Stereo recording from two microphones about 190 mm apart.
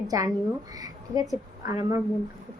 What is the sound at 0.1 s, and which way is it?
A woman's voice, 20° right (ahead or behind).